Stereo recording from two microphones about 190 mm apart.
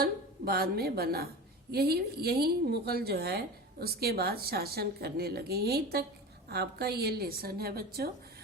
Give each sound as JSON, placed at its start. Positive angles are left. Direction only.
{"t": 0.0, "sound": "a woman's voice", "side_deg": -55}